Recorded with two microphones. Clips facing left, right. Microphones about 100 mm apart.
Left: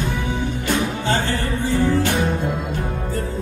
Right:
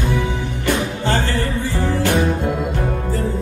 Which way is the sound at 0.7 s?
55° right (ahead or behind).